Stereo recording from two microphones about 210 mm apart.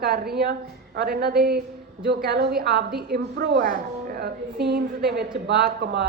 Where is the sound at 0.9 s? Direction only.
50° right (ahead or behind).